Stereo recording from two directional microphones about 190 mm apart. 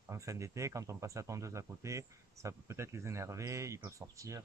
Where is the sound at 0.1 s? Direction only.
15° right (ahead or behind).